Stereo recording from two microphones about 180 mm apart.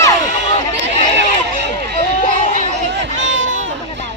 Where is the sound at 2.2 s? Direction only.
45° left (ahead or behind).